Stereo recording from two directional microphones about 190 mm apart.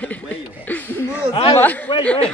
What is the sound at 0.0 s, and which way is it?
Chuckle, 10° left (ahead or behind).